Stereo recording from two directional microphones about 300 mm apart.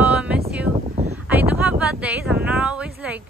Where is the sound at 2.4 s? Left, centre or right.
Centre.